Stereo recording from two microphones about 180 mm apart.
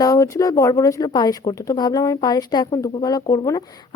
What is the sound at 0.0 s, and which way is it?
Speech, 20° left (ahead or behind).